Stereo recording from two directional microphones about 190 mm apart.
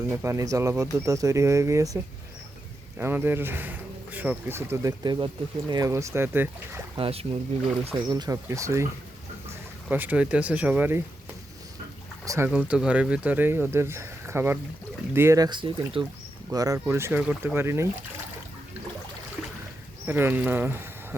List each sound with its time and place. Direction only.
0.2 s speech: 15° right (ahead or behind)
3.0 s speech: 10° right (ahead or behind)
6.9 s speech: 30° right (ahead or behind)
8.1 s speech: 20° right (ahead or behind)
12.2 s speech: 15° right (ahead or behind)
12.5 s speech: 5° right (ahead or behind)
20.1 s speech: 10° right (ahead or behind)